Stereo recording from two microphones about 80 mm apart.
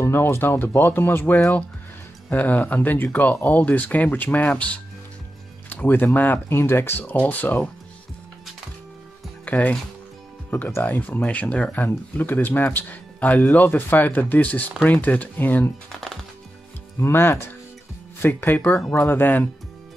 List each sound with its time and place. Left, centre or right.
0.0 s speech: left
9.4 s speech: centre
15.9 s speech: centre
17.0 s speech: left